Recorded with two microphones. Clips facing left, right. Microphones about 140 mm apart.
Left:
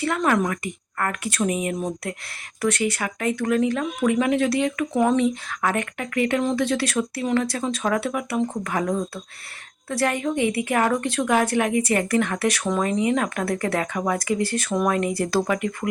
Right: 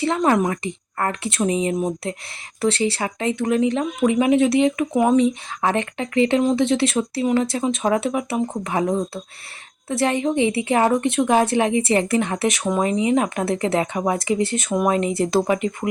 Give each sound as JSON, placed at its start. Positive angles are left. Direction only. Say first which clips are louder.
{"t": 0.0, "sound": "speech", "louder": "right 3 dB", "side_deg": -25}